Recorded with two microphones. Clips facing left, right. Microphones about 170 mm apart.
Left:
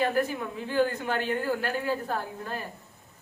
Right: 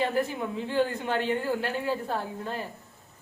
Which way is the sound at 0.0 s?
20° right (ahead or behind).